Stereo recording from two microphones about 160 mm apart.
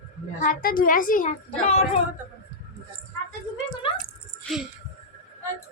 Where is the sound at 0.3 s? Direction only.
55° left (ahead or behind).